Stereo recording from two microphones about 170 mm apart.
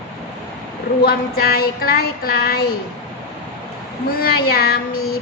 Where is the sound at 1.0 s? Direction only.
65° left (ahead or behind).